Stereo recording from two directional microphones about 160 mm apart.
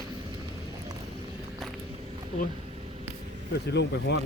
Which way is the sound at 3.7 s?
90° left.